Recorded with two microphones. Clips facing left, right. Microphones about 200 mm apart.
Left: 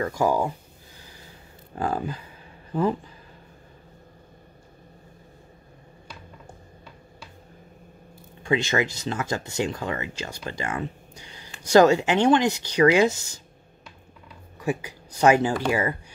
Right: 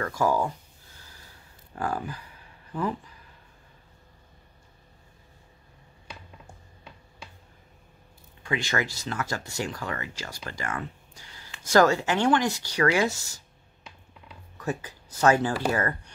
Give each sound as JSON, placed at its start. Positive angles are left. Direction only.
{"t": 0.0, "sound": "speech", "side_deg": 15}
{"t": 0.9, "sound": "gasp", "side_deg": 15}
{"t": 1.8, "sound": "speech", "side_deg": 25}
{"t": 8.4, "sound": "speech", "side_deg": 25}
{"t": 14.6, "sound": "speech", "side_deg": 10}